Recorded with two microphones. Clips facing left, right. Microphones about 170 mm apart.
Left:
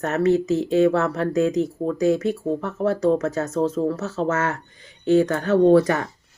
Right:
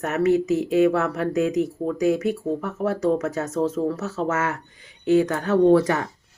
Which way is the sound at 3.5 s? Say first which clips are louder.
Left 1 dB; 30° left (ahead or behind).